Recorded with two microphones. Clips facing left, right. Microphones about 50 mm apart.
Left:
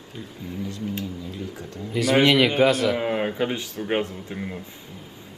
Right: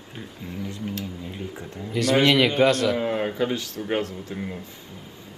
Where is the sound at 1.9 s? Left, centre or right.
Centre.